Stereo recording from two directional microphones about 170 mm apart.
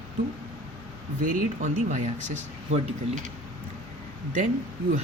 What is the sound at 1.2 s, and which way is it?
Speech, 50° right (ahead or behind).